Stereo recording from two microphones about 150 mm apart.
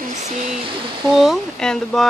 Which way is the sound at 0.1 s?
50° right (ahead or behind).